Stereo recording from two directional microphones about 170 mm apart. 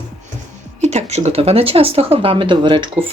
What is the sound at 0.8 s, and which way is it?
Speech, 40° right (ahead or behind).